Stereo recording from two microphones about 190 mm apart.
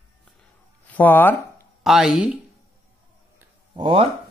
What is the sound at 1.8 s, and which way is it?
Speech, centre (ahead or behind).